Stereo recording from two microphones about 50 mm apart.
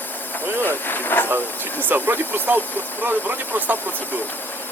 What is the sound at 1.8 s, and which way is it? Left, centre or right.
Speech, right.